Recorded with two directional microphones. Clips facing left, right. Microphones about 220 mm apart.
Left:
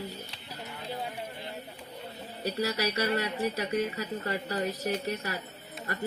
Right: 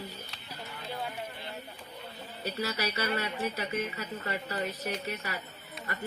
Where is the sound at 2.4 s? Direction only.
35° left (ahead or behind).